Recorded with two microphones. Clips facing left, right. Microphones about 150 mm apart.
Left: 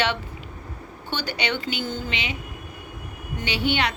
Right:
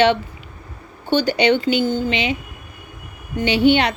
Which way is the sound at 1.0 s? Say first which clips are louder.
Right 12 dB; 20° right (ahead or behind).